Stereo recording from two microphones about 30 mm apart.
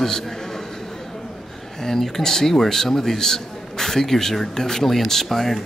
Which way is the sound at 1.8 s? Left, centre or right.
Centre.